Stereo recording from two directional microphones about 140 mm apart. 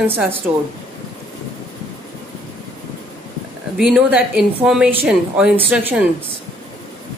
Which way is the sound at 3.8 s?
5° right (ahead or behind).